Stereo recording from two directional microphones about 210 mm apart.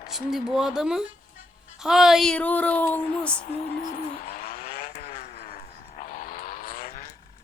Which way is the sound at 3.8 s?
40° left (ahead or behind).